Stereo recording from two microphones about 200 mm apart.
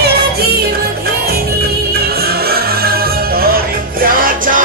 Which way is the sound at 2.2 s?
50° right (ahead or behind).